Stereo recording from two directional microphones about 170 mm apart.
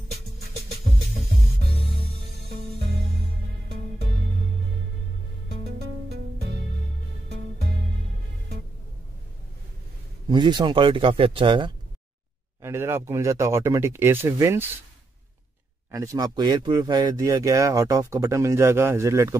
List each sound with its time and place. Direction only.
5.6 s music: 70° right (ahead or behind)
10.3 s speech: 25° right (ahead or behind)
12.6 s speech: 15° right (ahead or behind)
15.9 s speech: 20° right (ahead or behind)